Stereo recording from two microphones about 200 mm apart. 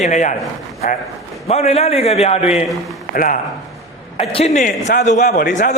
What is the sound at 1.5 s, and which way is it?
A man's voice, 30° left (ahead or behind).